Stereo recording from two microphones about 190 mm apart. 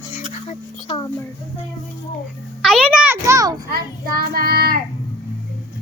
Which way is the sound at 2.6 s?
5° right (ahead or behind).